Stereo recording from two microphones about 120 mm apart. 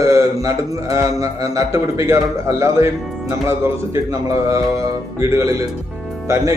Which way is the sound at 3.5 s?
20° right (ahead or behind).